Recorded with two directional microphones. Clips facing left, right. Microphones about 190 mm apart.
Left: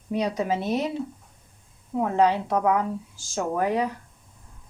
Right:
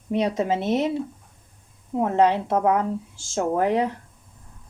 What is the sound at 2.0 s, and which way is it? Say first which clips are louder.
A woman's voice: right 2 dB; 20° right (ahead or behind).